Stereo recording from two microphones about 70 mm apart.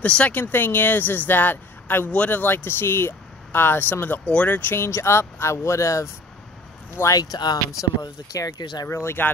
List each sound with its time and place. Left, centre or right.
0.0 s speech: centre; by 6.0 s left
7.2 s speech: left
8.0 s speech: left
8.8 s speech: left